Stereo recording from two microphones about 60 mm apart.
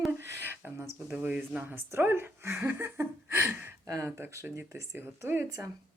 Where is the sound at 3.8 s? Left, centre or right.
Right.